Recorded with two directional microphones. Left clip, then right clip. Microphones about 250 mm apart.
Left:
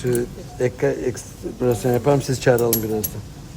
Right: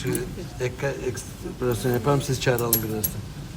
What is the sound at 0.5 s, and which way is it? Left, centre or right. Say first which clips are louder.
Speech: left 8 dB; left.